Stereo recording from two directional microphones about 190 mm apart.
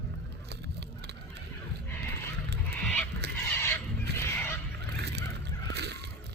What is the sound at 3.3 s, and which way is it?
Neigh, 10° left (ahead or behind).